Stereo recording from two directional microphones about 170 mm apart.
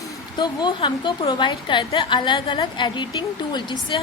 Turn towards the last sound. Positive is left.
turn(degrees=25)  # may be behind; listen again after turning